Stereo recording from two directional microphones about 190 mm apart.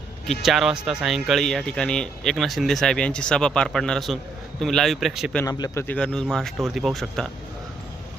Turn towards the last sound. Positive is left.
turn(degrees=0)  # may be behind; listen again after turning